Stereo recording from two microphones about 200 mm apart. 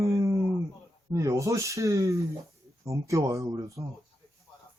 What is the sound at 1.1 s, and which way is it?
Speech, 15° right (ahead or behind).